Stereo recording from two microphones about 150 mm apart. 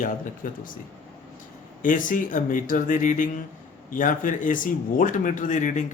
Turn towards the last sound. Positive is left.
turn(degrees=55)  # may be behind; listen again after turning